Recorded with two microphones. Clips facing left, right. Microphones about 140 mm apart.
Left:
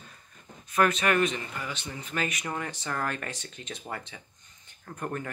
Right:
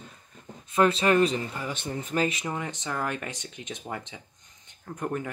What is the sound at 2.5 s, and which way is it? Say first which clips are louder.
Speech: right 1 dB; 20° right (ahead or behind).